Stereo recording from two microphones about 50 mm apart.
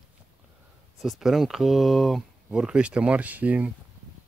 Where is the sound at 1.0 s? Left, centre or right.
Centre.